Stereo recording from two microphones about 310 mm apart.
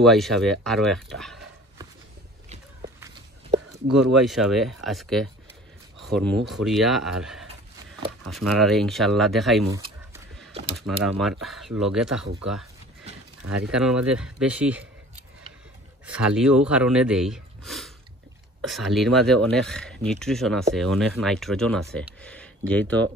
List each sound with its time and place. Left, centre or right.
0.0 s speech: centre
4.2 s speech: centre
10.8 s speech: centre
13.4 s speech: right
13.7 s speech: centre
16.1 s speech: centre